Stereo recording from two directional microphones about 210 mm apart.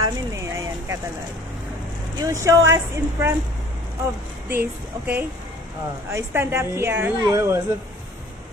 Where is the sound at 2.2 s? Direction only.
15° right (ahead or behind).